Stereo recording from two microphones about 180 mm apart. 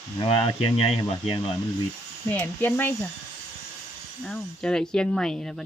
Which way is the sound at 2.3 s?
10° left (ahead or behind).